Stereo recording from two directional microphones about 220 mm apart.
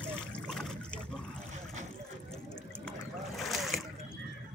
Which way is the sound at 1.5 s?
35° right (ahead or behind).